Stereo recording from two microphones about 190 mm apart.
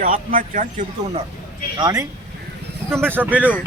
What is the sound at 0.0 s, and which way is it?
Speech, 45° right (ahead or behind).